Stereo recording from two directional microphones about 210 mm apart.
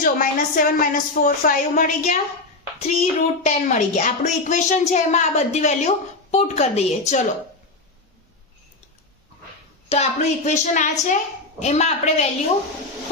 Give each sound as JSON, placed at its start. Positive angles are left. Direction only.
{"t": 0.0, "sound": "a child's voice", "side_deg": 40}
{"t": 9.9, "sound": "a child's voice", "side_deg": 30}